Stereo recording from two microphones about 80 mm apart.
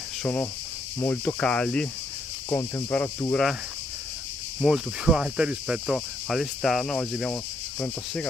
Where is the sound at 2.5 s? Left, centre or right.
Left.